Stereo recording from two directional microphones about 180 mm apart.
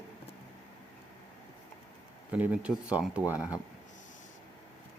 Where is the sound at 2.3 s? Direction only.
5° right (ahead or behind).